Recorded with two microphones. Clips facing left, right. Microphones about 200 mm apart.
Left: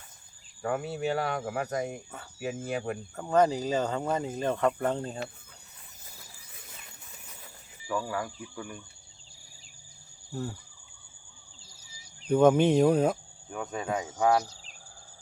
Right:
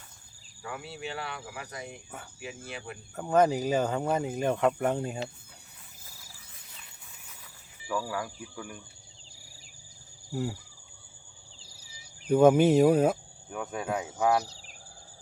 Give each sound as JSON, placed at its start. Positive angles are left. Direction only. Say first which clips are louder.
{"t": 0.6, "sound": "speech", "louder": "left 9 dB", "side_deg": 50}
{"t": 3.2, "sound": "speech", "louder": "right 1 dB", "side_deg": -10}
{"t": 7.9, "sound": "speech", "louder": "left 1 dB", "side_deg": -5}
{"t": 10.3, "sound": "speech", "louder": "right 3 dB", "side_deg": -10}
{"t": 12.3, "sound": "speech", "louder": "right 1 dB", "side_deg": -5}